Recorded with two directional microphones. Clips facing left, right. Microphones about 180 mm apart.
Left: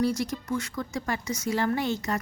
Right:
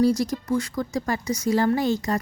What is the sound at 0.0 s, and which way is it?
A woman's voice, 35° right (ahead or behind).